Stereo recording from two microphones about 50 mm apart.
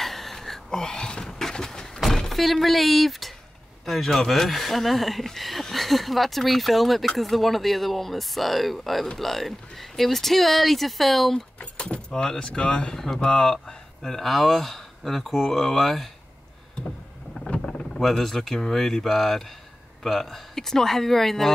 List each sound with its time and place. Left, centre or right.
0.0 s a sound: centre
2.0 s vehicle: centre
3.8 s speech: centre
11.6 s speech: left
12.9 s speech: centre
17.5 s vehicle: centre
18.0 s speech: centre